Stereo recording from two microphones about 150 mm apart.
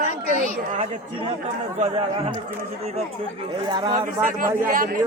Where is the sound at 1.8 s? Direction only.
45° right (ahead or behind).